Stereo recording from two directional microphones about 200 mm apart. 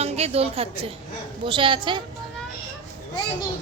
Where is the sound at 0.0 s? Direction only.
30° right (ahead or behind).